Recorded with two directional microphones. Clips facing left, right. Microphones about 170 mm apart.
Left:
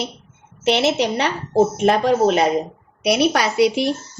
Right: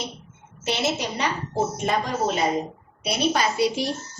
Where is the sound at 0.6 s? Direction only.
70° left (ahead or behind).